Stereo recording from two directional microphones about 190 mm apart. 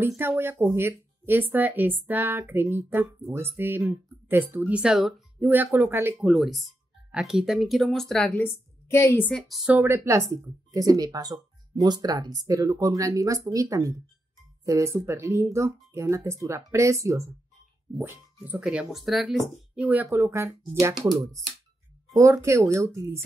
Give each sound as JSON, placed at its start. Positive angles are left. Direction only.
{"t": 0.2, "sound": "speech", "side_deg": -10}
{"t": 6.2, "sound": "speech", "side_deg": 0}
{"t": 22.1, "sound": "speech", "side_deg": -15}